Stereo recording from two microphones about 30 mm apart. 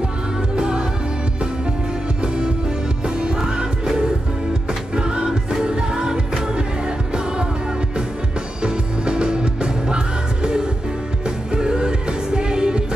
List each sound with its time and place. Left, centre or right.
0.6 s music: right
2.2 s music: right
8.6 s music: right